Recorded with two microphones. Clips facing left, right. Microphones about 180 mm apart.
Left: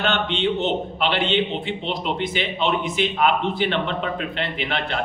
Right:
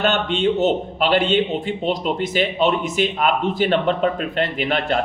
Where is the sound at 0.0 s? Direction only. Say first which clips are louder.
Right 3 dB; 45° right (ahead or behind).